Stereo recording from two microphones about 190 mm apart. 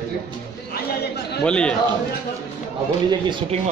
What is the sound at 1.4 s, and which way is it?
Speech, 5° left (ahead or behind).